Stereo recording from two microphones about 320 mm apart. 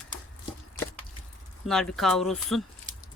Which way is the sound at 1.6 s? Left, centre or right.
Centre.